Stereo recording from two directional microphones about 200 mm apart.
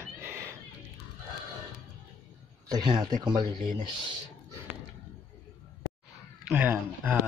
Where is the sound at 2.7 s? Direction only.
20° right (ahead or behind).